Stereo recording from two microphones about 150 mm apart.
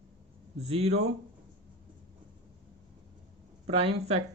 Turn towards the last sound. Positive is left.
turn(degrees=-45)  # may be behind; listen again after turning